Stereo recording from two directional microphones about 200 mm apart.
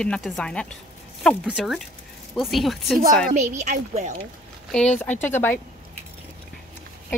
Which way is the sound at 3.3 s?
35° right (ahead or behind).